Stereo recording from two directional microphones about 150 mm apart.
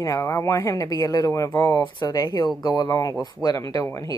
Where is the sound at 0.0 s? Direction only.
20° left (ahead or behind).